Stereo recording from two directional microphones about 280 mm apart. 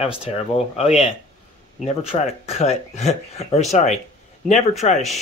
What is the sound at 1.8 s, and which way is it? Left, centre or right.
Speech, left.